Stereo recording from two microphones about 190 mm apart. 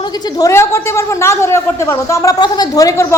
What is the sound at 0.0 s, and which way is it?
A woman's voice, 20° left (ahead or behind).